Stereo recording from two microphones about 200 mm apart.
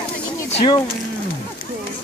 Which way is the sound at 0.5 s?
25° left (ahead or behind).